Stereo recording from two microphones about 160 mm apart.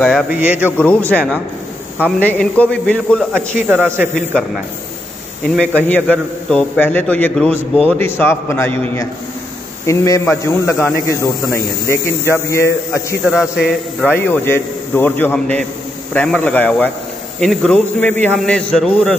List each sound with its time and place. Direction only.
0.3 s a man's voice: 10° right (ahead or behind)
0.7 s a man's voice: 10° left (ahead or behind)
3.6 s a man's voice: 10° right (ahead or behind)
5.6 s a man's voice: 10° left (ahead or behind)
13.2 s a man's voice: 5° right (ahead or behind)
14.0 s a man's voice: 10° left (ahead or behind)